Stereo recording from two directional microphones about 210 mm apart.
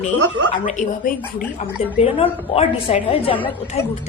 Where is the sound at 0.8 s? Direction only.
40° left (ahead or behind).